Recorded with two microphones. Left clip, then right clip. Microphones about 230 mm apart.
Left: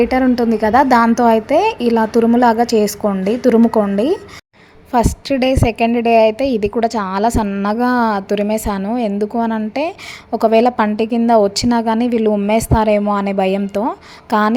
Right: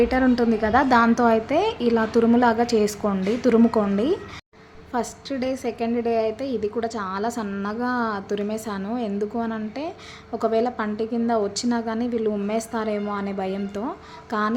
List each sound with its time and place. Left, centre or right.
0.0 s a woman's voice: centre
4.9 s a woman's voice: left